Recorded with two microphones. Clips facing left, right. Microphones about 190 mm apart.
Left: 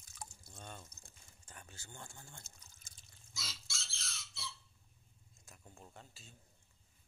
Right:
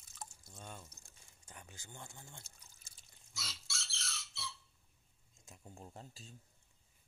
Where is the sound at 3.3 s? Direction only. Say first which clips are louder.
Right 1 dB; 65° right (ahead or behind).